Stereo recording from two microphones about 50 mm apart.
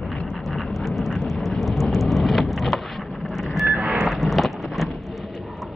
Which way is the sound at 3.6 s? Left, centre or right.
Right.